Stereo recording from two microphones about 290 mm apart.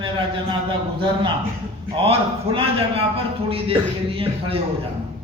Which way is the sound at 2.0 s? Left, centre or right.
Centre.